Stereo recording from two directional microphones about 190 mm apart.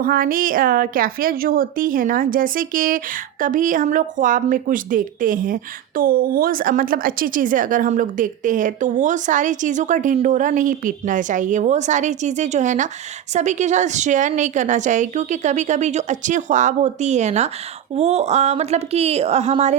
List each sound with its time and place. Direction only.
0.0 s a woman's voice: 50° right (ahead or behind)